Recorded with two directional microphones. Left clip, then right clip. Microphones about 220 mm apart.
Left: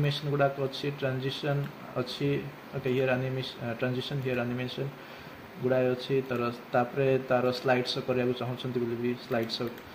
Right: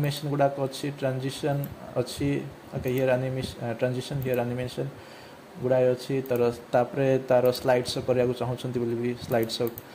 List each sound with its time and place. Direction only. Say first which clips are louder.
0.0 s speech: right 2 dB; 40° right (ahead or behind)